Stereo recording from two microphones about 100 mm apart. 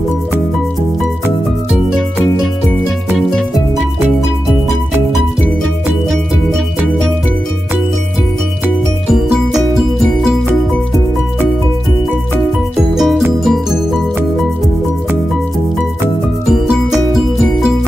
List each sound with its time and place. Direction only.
3.1 s music: centre (ahead or behind)
12.9 s music: centre (ahead or behind)
16.4 s music: 5° right (ahead or behind)